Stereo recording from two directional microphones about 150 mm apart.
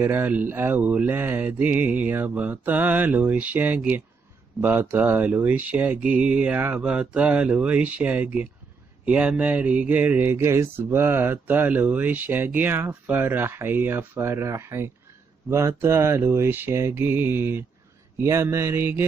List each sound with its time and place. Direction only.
0.0 s speech: 15° right (ahead or behind)